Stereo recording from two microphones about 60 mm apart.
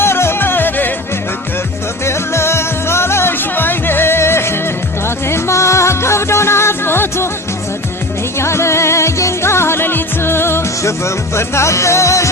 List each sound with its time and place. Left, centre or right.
0.0 s music: left
2.0 s music: left
8.4 s music: left